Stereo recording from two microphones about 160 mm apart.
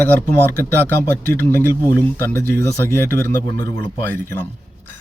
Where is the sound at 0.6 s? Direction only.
15° left (ahead or behind).